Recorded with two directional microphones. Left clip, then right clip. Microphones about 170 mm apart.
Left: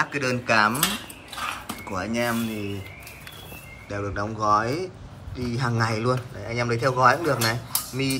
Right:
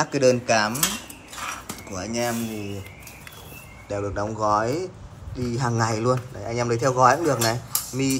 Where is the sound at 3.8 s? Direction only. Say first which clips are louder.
Right 2 dB; 10° right (ahead or behind).